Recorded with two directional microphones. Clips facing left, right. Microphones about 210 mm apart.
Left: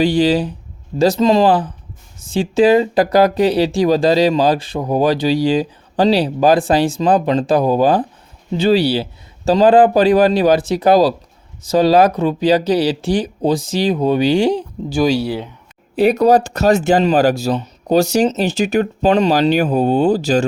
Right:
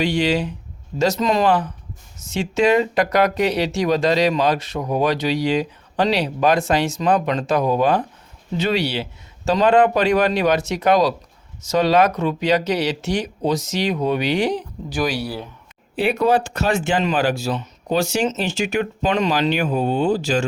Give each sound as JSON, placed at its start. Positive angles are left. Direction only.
{"t": 0.0, "sound": "speech", "side_deg": 35}
{"t": 16.0, "sound": "speech", "side_deg": 40}